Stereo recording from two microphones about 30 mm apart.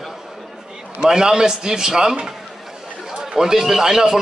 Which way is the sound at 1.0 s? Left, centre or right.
Right.